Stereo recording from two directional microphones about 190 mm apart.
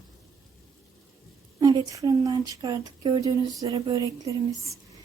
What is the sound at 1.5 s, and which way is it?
Speech, 20° right (ahead or behind).